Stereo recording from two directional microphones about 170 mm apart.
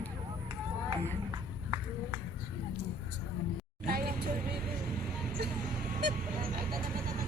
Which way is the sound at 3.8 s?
60° right (ahead or behind).